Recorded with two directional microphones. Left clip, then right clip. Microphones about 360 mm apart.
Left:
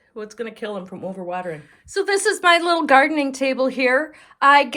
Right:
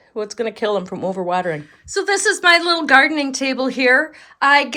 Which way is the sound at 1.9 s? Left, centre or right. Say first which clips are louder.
Right 2 dB; centre.